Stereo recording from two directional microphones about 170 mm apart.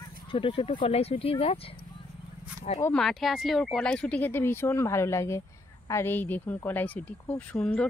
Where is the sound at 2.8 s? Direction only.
5° left (ahead or behind).